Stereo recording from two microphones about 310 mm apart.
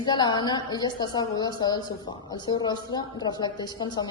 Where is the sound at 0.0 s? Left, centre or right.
Centre.